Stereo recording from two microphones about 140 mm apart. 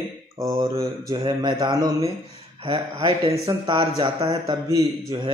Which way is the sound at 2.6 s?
35° right (ahead or behind).